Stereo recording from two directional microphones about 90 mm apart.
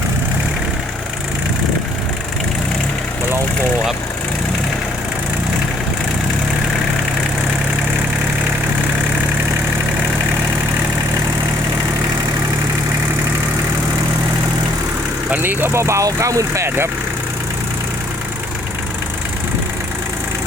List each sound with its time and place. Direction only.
15.3 s speech: 20° right (ahead or behind)